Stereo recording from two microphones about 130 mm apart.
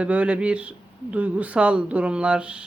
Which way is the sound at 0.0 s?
10° right (ahead or behind).